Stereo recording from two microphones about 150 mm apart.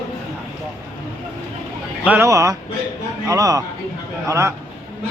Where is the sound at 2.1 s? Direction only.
15° right (ahead or behind).